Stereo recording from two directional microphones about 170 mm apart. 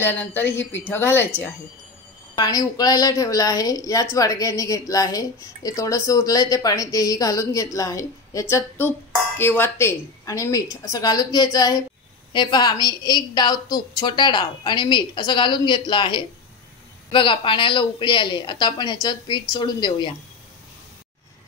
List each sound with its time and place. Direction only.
0.0 s speech: 10° left (ahead or behind)
2.3 s a woman's voice: 25° left (ahead or behind)